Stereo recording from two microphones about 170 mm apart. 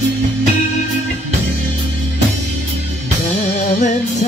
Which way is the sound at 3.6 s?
45° left (ahead or behind).